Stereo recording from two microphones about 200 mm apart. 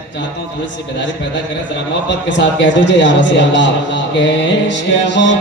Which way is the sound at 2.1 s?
60° left (ahead or behind).